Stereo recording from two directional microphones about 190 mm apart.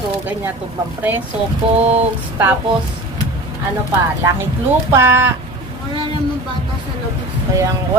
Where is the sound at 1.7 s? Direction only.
35° right (ahead or behind).